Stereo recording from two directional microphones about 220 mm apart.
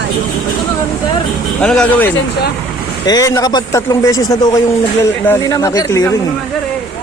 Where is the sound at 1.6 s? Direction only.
5° left (ahead or behind).